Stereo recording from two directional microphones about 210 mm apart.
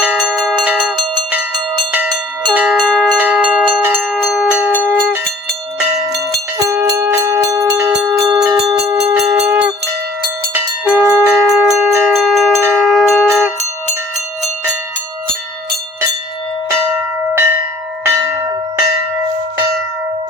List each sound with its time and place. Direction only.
0.0 s bell: 5° right (ahead or behind)
6.6 s music: 15° right (ahead or behind)
8.1 s bell: centre (ahead or behind)
8.9 s bell: 15° right (ahead or behind)
16.6 s church bell: 10° right (ahead or behind)